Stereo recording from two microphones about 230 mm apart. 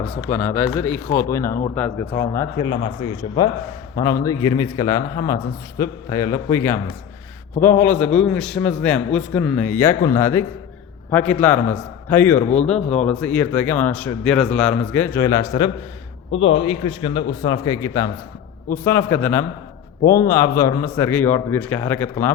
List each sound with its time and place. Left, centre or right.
0.3 s a man's voice: centre
3.9 s a man's voice: centre
12.4 s speech: left
13.0 s a man's voice: centre